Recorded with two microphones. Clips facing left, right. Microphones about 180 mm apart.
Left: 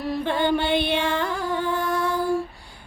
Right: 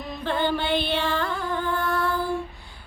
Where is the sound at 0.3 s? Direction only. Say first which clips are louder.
Left 1 dB; 15° left (ahead or behind).